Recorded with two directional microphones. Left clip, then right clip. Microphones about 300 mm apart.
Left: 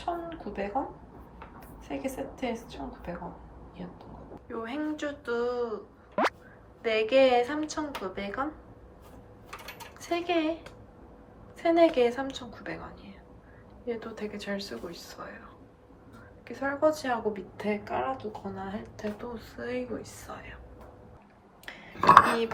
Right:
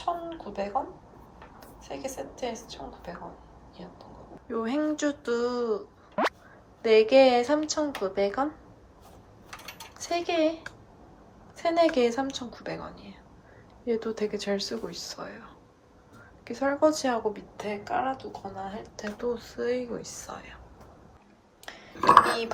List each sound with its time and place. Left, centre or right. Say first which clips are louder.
0.0 s a sound: right 2 dB; centre
1.5 s a woman's voice: left 1 dB; centre
4.4 s speech: right 6 dB; centre
6.8 s speech: right 4 dB; centre
10.0 s speech: right 3 dB; centre
11.5 s speech: left 1 dB; centre
16.4 s speech: right 3 dB; centre